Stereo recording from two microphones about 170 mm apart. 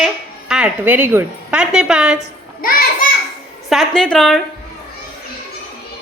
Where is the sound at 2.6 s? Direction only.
60° left (ahead or behind).